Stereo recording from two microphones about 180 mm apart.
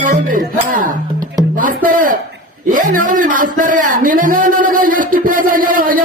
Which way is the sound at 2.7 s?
45° right (ahead or behind).